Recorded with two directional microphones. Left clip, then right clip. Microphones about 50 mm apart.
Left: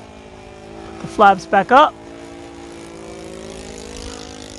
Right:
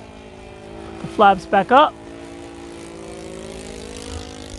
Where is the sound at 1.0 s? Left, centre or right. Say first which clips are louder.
Left 2 dB; centre.